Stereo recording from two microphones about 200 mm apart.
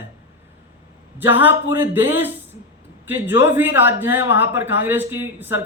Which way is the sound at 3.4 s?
10° right (ahead or behind).